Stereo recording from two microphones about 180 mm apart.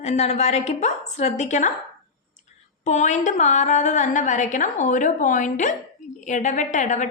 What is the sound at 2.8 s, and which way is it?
A woman's voice, 40° left (ahead or behind).